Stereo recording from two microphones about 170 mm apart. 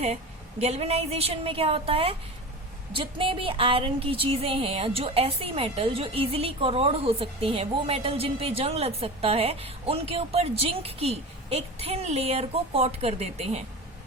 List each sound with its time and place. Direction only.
0.6 s speech: 40° right (ahead or behind)